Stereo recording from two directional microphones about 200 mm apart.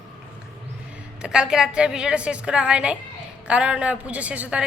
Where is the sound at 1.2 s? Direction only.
5° right (ahead or behind).